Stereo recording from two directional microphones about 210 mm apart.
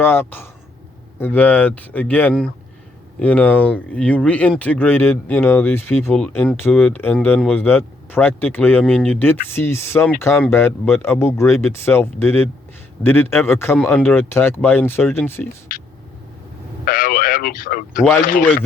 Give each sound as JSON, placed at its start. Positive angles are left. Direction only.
{"t": 0.0, "sound": "speech", "side_deg": 10}
{"t": 16.8, "sound": "speech", "side_deg": 40}